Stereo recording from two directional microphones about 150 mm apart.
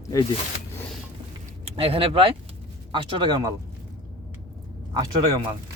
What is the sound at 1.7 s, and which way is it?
Speech, 40° right (ahead or behind).